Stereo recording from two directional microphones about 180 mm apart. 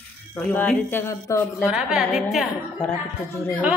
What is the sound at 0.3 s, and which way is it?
Speech, 10° left (ahead or behind).